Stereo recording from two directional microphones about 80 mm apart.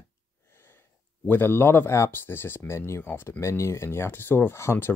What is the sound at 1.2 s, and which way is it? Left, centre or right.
Speech, left.